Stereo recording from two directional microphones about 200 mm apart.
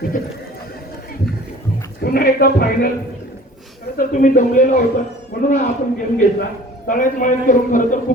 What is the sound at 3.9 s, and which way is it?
Speech, 40° left (ahead or behind).